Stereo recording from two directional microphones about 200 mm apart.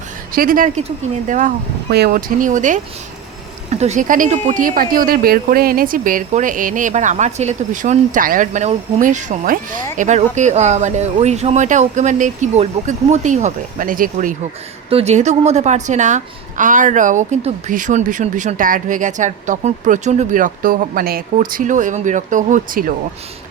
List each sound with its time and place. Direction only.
0.3 s speech: 45° right (ahead or behind)
14.8 s speech: 30° right (ahead or behind)